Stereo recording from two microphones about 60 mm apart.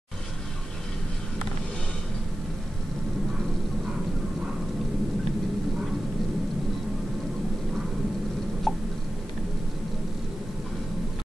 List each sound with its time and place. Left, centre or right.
8.7 s hiccup: centre